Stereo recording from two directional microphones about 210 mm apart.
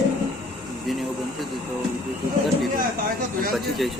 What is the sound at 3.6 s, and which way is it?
Vehicle, centre (ahead or behind).